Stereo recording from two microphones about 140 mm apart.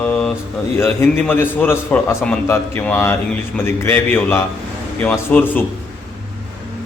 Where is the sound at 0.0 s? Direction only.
5° left (ahead or behind).